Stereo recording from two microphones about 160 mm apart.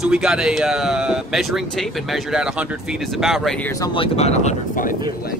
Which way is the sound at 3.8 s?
35° left (ahead or behind).